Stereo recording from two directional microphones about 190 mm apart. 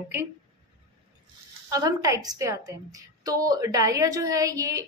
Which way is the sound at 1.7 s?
20° right (ahead or behind).